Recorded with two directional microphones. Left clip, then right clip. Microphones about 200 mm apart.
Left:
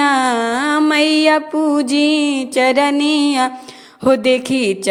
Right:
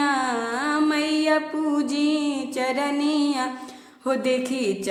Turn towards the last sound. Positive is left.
turn(degrees=45)  # may be behind; listen again after turning